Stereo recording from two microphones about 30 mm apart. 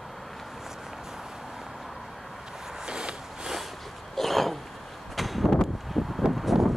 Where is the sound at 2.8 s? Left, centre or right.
Right.